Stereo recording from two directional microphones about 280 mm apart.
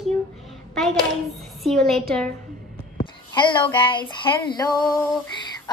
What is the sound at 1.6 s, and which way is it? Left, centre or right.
Speech, centre.